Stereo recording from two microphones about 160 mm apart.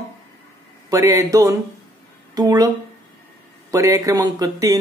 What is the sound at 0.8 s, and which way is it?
Speech, 20° right (ahead or behind).